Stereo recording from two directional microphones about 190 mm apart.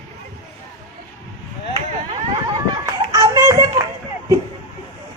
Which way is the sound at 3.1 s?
20° right (ahead or behind).